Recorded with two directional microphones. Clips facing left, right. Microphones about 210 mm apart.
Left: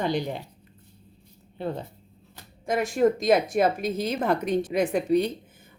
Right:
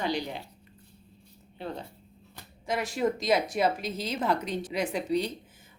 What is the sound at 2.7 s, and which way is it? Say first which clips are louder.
A woman's voice: left 6 dB; 50° left (ahead or behind).